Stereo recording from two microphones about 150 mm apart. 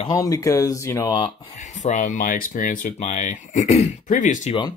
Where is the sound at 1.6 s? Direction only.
55° left (ahead or behind).